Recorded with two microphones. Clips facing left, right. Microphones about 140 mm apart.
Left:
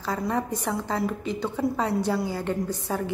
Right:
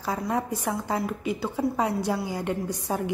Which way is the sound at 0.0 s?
10° right (ahead or behind).